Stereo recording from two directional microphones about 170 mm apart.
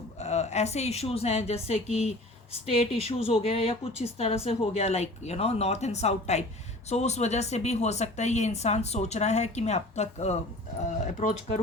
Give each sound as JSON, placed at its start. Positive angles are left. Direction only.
{"t": 0.2, "sound": "speech", "side_deg": 40}